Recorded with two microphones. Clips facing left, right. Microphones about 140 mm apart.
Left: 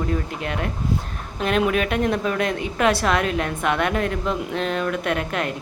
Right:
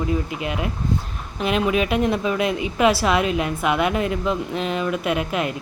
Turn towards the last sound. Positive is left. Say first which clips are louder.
# right 1 dB
turn(degrees=-5)  # may be behind; listen again after turning